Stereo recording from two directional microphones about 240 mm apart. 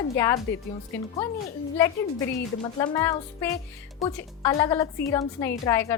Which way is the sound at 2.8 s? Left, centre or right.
Centre.